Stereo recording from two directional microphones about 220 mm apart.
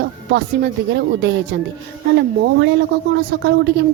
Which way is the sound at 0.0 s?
50° right (ahead or behind).